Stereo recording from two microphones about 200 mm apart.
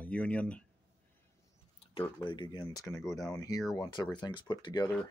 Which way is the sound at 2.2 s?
20° left (ahead or behind).